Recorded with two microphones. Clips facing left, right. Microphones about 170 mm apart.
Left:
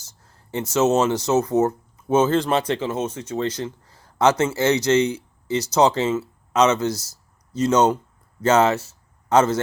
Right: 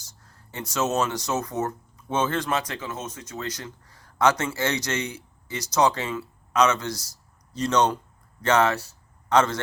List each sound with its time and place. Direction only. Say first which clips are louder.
0.5 s speech: left 7 dB; 25° left (ahead or behind)